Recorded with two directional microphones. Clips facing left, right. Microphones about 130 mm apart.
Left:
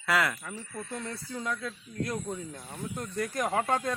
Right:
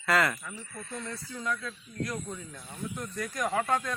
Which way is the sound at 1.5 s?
25° left (ahead or behind).